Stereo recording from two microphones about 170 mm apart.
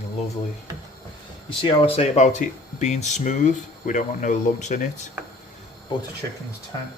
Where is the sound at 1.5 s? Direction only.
35° left (ahead or behind).